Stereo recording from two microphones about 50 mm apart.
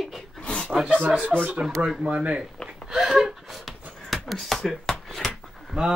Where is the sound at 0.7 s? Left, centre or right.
Centre.